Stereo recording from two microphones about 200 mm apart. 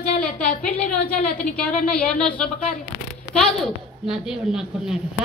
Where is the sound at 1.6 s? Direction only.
5° left (ahead or behind).